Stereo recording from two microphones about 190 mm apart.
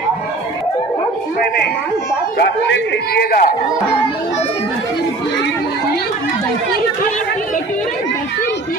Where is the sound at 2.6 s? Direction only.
70° left (ahead or behind); by 3.6 s 50° left (ahead or behind).